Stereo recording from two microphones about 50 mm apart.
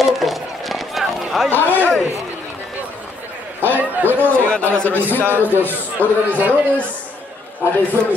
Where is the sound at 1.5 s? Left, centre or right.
Left.